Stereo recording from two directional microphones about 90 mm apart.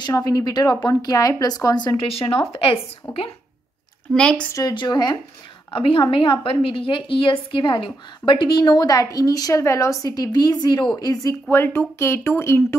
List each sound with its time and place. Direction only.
0.0 s speech: 50° left (ahead or behind)
2.0 s speech: 85° left
4.1 s speech: 10° left (ahead or behind)
4.7 s speech: 55° left (ahead or behind)
5.7 s a woman's voice: 80° left; by 11.3 s 45° left (ahead or behind)
11.5 s speech: 25° left (ahead or behind)